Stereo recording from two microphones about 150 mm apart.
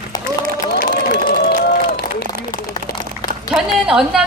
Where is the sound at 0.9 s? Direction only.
90° left.